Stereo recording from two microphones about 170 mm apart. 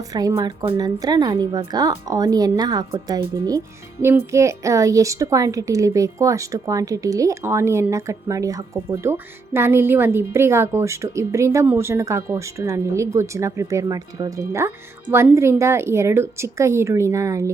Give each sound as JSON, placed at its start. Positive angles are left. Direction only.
{"t": 0.1, "sound": "a woman's voice", "side_deg": -20}